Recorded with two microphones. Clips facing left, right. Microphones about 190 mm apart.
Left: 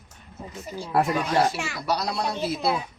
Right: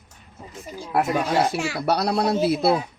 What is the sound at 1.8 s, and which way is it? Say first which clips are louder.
Speech: right 5 dB; 60° right (ahead or behind).